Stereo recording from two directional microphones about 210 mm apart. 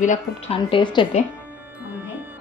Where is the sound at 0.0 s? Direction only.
30° left (ahead or behind).